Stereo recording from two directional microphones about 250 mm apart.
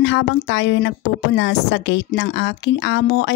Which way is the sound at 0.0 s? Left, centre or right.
Left.